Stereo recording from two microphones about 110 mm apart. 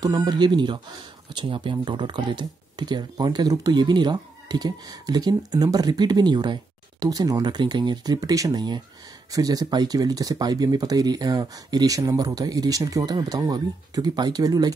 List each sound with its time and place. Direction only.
0.0 s speech: 40° right (ahead or behind)